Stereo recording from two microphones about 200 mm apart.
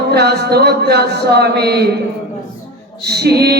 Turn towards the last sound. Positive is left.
turn(degrees=-55)  # may be behind; listen again after turning